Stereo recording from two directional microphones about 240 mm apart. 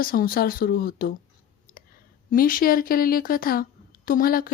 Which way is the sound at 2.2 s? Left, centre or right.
Left.